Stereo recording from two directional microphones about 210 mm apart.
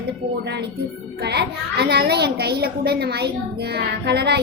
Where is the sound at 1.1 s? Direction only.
50° right (ahead or behind).